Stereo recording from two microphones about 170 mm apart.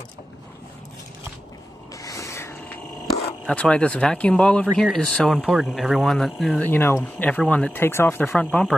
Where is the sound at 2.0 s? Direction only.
20° left (ahead or behind).